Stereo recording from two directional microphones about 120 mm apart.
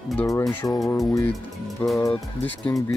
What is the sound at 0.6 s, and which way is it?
Speech, 30° left (ahead or behind).